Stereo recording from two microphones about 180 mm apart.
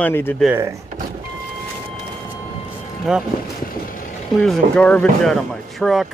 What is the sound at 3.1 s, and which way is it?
Speech, 5° right (ahead or behind).